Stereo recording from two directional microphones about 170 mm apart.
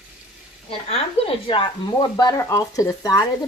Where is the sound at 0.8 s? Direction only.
35° left (ahead or behind).